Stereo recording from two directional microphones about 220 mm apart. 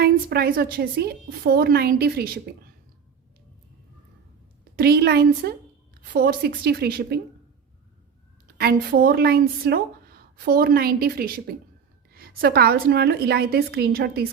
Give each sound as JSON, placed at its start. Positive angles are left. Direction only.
{"t": 0.0, "sound": "speech", "side_deg": -45}
{"t": 4.6, "sound": "a woman's voice", "side_deg": -45}
{"t": 8.5, "sound": "speech", "side_deg": -45}